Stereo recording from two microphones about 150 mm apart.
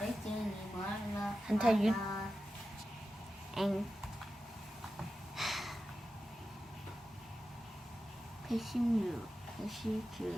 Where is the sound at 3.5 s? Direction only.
Centre (ahead or behind).